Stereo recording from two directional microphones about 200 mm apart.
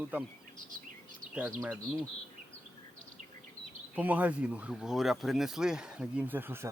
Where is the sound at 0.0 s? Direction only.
10° right (ahead or behind).